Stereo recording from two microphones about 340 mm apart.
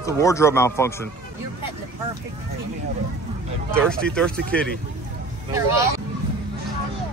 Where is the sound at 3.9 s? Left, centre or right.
Centre.